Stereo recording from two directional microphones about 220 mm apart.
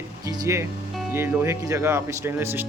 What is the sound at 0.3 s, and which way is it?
Speech, 15° right (ahead or behind).